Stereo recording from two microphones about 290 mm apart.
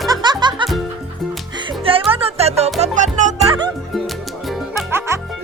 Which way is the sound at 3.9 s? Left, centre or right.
Centre.